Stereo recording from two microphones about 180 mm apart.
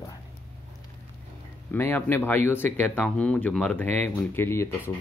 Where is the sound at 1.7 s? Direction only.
10° left (ahead or behind).